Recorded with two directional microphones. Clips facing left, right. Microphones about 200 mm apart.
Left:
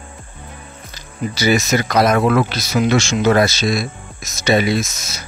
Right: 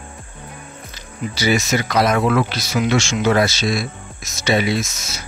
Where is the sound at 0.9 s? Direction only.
45° left (ahead or behind).